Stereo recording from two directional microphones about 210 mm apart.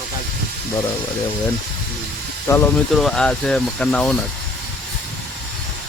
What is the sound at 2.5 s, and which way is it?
Speech, 10° left (ahead or behind).